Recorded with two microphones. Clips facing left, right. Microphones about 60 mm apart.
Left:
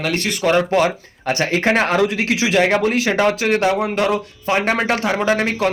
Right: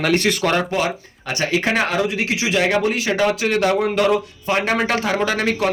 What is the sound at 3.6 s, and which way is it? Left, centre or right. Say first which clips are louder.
Speech: even; left.